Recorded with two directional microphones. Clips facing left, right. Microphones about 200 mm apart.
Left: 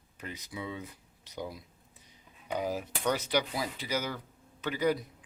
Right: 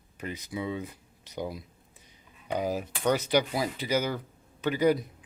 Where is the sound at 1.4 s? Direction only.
65° right (ahead or behind).